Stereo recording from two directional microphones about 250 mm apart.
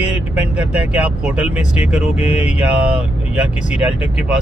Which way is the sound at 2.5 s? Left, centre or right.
Centre.